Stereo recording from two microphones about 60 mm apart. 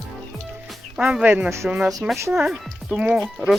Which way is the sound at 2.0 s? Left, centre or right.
Right.